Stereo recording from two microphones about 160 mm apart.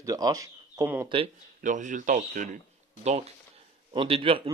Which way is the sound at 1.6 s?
50° right (ahead or behind).